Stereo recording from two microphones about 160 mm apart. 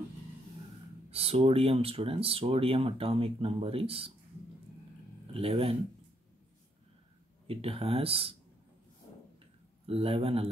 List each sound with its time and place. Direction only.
1.1 s speech: 35° right (ahead or behind)
5.3 s speech: 35° right (ahead or behind)
7.4 s speech: 35° right (ahead or behind)
9.8 s speech: 35° right (ahead or behind)